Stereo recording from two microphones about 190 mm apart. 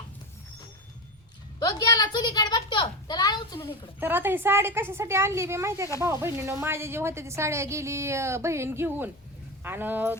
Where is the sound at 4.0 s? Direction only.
10° right (ahead or behind).